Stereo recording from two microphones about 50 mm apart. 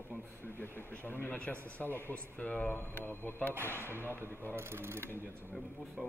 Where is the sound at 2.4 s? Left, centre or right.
Left.